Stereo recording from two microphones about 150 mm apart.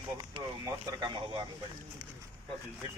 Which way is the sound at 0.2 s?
25° right (ahead or behind).